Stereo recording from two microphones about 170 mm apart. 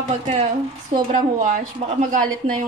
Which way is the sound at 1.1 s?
50° right (ahead or behind).